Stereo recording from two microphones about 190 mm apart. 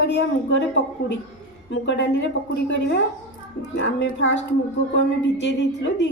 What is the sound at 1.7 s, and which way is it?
A woman's voice, 70° left (ahead or behind).